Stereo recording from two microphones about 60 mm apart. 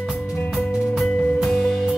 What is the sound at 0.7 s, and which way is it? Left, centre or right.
Music, centre.